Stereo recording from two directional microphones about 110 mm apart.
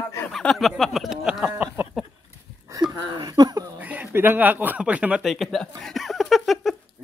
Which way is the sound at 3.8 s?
15° right (ahead or behind).